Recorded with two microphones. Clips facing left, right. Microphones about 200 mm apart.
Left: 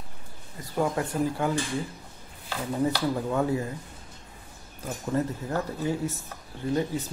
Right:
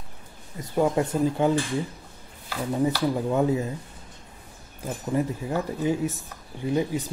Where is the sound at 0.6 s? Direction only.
20° right (ahead or behind).